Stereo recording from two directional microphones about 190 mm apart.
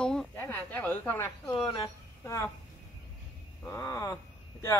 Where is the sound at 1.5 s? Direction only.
25° left (ahead or behind).